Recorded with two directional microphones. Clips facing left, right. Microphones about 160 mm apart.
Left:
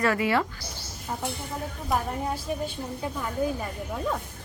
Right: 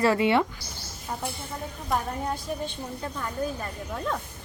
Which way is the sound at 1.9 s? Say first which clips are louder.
Even; 5° left (ahead or behind).